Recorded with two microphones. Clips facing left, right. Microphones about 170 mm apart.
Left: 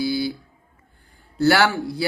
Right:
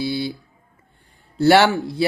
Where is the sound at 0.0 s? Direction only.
25° right (ahead or behind).